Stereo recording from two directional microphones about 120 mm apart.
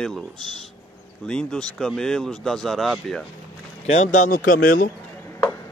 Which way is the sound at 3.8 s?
65° left (ahead or behind).